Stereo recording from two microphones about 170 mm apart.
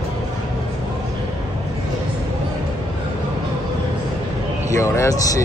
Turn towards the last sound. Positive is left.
turn(degrees=20)  # may be behind; listen again after turning